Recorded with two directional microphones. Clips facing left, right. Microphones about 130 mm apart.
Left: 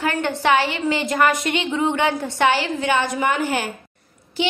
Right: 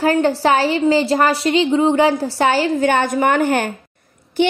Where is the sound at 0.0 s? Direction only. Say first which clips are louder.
Right 6 dB; 35° right (ahead or behind).